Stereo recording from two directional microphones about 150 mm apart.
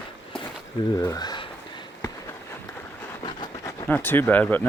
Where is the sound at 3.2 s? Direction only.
25° left (ahead or behind).